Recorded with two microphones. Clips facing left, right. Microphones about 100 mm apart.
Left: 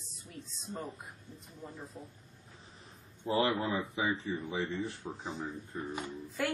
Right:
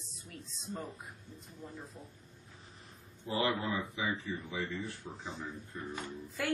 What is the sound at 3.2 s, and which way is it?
Speech, 30° left (ahead or behind).